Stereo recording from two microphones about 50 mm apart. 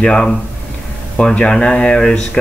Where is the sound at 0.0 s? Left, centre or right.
Centre.